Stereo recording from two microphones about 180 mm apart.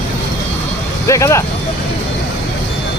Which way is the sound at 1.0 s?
15° left (ahead or behind).